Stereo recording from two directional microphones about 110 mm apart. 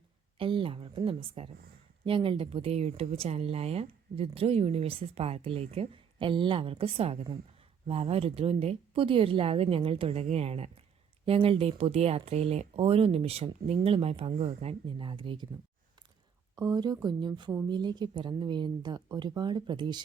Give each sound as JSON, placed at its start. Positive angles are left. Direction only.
{"t": 0.3, "sound": "speech", "side_deg": -55}
{"t": 16.6, "sound": "a woman's voice", "side_deg": -40}